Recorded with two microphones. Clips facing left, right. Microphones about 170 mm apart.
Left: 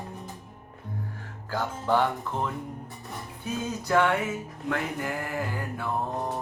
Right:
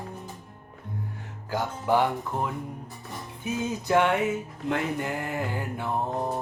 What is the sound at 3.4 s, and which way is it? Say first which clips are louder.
Music: right 2 dB; 20° right (ahead or behind).